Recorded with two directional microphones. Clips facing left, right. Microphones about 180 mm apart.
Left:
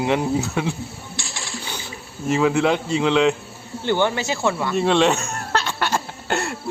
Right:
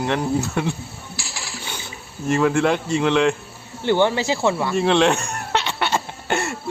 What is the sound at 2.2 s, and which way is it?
Speech, 5° left (ahead or behind).